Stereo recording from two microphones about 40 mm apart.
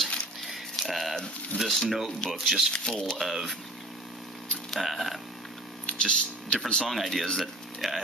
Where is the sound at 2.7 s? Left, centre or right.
Left.